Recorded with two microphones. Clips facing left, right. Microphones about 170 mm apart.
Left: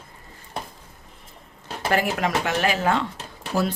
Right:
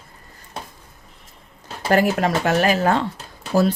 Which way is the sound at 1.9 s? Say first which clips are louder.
Right 5 dB; 40° right (ahead or behind).